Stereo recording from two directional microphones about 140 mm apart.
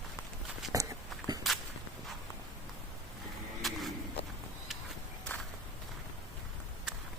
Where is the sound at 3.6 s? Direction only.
Centre (ahead or behind).